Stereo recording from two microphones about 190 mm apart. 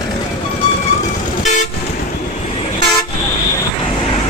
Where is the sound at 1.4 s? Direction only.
40° left (ahead or behind).